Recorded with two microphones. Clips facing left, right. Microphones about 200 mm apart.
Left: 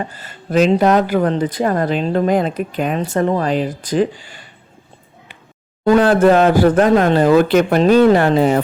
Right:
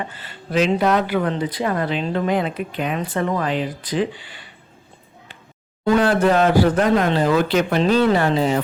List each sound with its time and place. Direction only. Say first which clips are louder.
0.0 s speech: left 4 dB; 40° left (ahead or behind)
5.8 s speech: left 5 dB; 45° left (ahead or behind)